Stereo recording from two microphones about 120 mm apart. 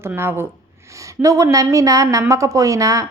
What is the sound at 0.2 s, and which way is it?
A woman's voice, 20° right (ahead or behind).